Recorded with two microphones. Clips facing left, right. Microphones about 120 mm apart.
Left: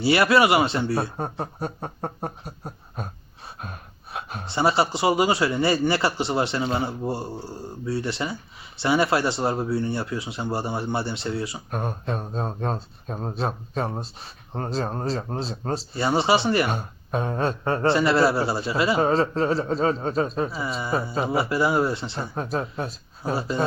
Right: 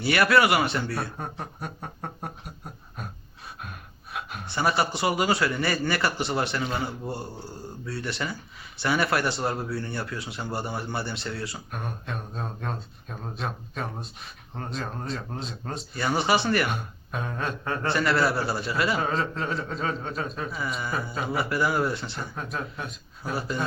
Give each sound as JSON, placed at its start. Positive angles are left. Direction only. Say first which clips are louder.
{"t": 0.0, "sound": "a man's voice", "louder": "left 3 dB", "side_deg": 25}
{"t": 11.7, "sound": "a man's voice", "louder": "left 6 dB", "side_deg": 35}